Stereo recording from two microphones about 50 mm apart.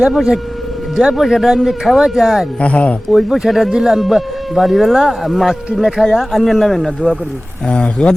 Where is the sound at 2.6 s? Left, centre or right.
Left.